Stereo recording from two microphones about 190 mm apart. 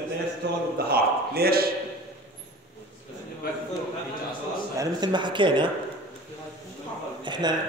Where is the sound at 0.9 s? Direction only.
55° right (ahead or behind).